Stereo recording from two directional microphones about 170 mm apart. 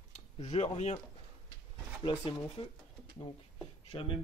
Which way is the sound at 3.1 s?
35° left (ahead or behind).